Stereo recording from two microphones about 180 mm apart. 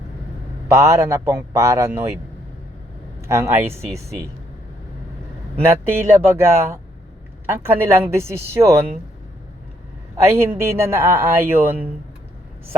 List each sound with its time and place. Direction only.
0.7 s speech: 15° right (ahead or behind)
3.2 s speech: 15° right (ahead or behind)
5.6 s speech: 15° right (ahead or behind)
10.6 s speech: 15° right (ahead or behind)